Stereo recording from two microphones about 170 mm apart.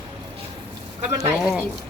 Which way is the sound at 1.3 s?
Centre (ahead or behind).